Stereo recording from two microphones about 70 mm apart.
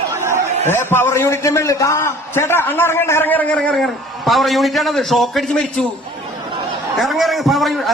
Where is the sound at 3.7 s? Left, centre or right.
Centre.